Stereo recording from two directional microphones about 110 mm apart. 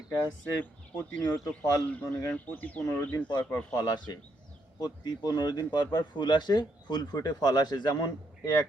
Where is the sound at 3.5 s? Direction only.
35° left (ahead or behind).